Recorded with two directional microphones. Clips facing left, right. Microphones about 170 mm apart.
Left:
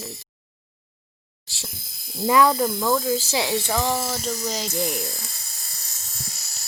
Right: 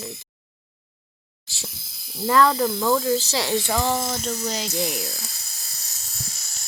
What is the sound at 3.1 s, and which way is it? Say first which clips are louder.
Speech: right 1 dB; 10° left (ahead or behind).